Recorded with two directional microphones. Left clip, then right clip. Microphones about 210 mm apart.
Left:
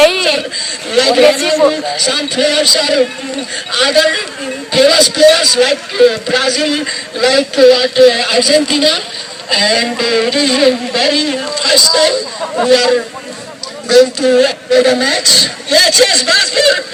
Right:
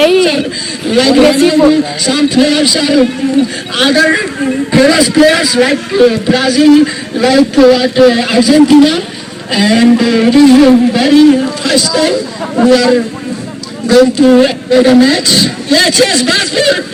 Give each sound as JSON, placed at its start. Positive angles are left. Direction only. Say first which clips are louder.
{"t": 0.0, "sound": "chuckle", "louder": "right 1 dB", "side_deg": 15}
{"t": 0.9, "sound": "a man's voice", "louder": "right 1 dB", "side_deg": 10}